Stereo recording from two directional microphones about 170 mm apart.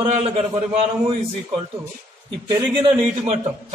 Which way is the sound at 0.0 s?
35° right (ahead or behind).